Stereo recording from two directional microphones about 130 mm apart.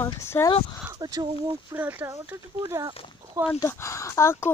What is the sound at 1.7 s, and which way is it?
Speech, 15° right (ahead or behind).